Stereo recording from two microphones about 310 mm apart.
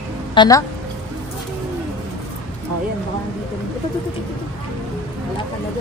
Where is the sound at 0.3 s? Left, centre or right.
Centre.